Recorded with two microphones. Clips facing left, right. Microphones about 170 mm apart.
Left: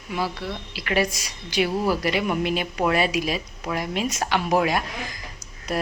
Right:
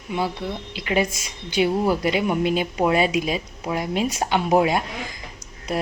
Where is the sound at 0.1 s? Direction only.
25° right (ahead or behind).